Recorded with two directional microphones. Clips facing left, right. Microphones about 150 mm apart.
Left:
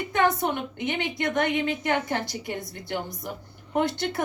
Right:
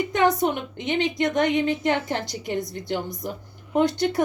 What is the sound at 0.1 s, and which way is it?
A woman's voice, 20° right (ahead or behind).